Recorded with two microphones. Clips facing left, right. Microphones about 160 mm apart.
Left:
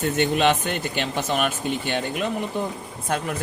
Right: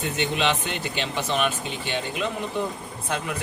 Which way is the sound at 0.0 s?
50° left (ahead or behind).